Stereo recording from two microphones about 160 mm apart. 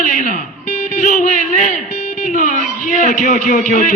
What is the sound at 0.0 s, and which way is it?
Music, 55° left (ahead or behind).